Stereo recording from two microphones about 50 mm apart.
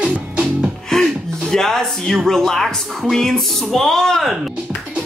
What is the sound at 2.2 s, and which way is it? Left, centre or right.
Speech, centre.